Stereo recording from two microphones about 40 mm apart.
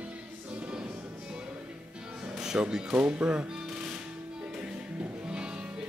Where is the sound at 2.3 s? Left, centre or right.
Centre.